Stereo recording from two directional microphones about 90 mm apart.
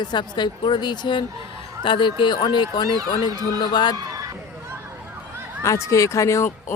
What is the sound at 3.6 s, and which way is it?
Speech, 55° left (ahead or behind).